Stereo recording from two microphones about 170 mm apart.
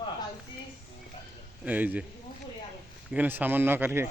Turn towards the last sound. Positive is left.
turn(degrees=-10)  # may be behind; listen again after turning